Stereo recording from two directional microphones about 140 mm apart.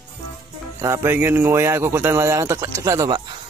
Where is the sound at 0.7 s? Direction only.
20° right (ahead or behind).